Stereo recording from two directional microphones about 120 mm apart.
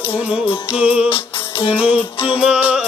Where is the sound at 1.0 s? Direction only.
50° left (ahead or behind).